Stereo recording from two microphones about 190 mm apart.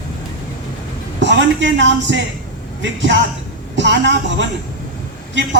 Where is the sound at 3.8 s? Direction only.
70° right (ahead or behind).